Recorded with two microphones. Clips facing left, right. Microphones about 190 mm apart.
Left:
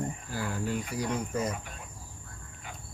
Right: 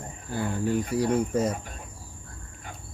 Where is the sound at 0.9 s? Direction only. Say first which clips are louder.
Right 8 dB; 30° right (ahead or behind).